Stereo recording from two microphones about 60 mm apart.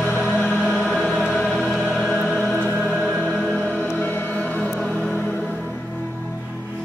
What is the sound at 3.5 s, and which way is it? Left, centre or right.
Music, left.